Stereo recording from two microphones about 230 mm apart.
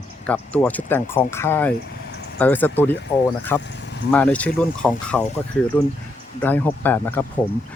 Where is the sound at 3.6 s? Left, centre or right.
Left.